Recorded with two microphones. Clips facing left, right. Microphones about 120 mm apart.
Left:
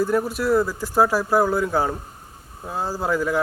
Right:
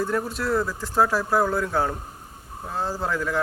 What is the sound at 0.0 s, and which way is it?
Speech, 5° left (ahead or behind).